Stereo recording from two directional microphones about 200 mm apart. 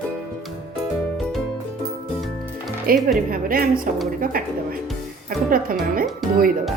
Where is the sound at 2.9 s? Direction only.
45° right (ahead or behind).